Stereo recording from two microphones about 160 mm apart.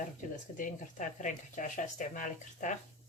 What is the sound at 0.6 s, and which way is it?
Speech, 50° left (ahead or behind).